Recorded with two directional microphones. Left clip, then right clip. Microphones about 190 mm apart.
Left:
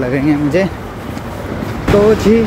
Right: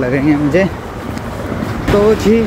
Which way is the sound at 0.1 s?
10° left (ahead or behind).